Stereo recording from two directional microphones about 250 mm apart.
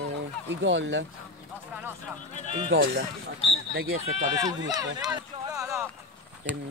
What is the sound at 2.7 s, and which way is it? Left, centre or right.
Speech, right.